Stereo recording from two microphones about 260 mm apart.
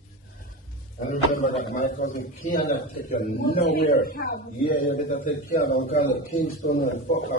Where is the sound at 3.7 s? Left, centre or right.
Left.